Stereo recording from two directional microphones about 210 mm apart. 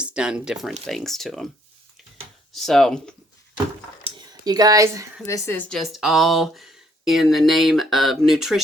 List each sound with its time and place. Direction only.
0.0 s speech: 5° right (ahead or behind)
2.5 s speech: centre (ahead or behind)
4.0 s a sound: 20° right (ahead or behind)
5.2 s speech: 15° left (ahead or behind)